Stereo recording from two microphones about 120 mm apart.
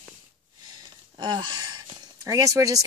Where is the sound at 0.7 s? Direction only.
35° right (ahead or behind).